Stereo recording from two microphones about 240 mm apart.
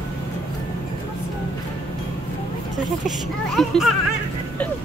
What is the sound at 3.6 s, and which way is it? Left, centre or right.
Speech, centre.